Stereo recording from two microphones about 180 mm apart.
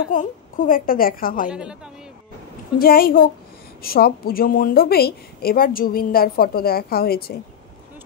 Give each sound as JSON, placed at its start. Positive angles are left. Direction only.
{"t": 0.1, "sound": "a woman's voice", "side_deg": 50}
{"t": 1.5, "sound": "a woman's voice", "side_deg": -5}
{"t": 2.8, "sound": "a woman's voice", "side_deg": 55}